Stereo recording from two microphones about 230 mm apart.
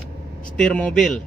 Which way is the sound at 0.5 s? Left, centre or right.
Centre.